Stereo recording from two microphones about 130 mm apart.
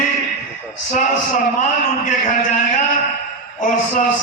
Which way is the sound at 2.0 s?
80° left.